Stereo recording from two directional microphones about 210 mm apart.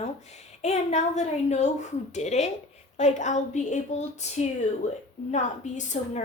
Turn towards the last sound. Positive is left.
turn(degrees=35)  # may be behind; listen again after turning